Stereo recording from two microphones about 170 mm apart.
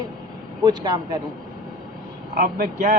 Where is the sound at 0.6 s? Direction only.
25° right (ahead or behind).